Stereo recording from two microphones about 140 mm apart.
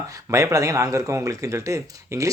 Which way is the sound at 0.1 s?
20° right (ahead or behind).